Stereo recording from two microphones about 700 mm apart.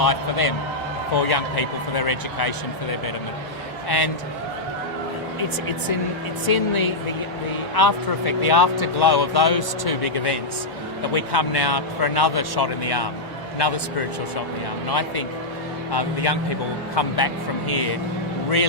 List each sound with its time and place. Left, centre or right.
0.0 s a man's voice: left
3.8 s speech: left
6.5 s a man's voice: left
14.8 s speech: left